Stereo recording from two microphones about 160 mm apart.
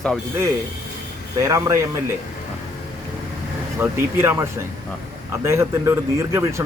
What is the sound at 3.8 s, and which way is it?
Speech, 15° right (ahead or behind).